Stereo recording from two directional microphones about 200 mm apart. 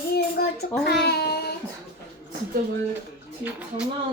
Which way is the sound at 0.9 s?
55° left (ahead or behind).